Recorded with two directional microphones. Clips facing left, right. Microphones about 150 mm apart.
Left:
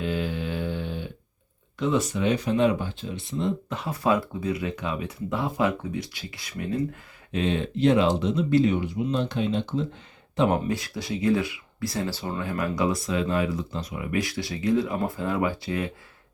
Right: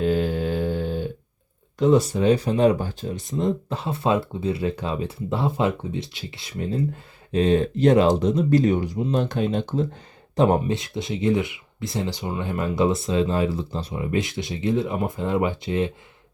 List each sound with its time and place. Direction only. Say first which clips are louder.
0.0 s mantra: right 6 dB; 40° right (ahead or behind)
1.8 s speech: right 6 dB; 35° right (ahead or behind)
10.3 s speech: right 4 dB; 35° right (ahead or behind)